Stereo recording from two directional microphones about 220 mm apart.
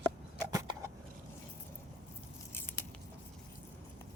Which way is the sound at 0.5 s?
15° right (ahead or behind).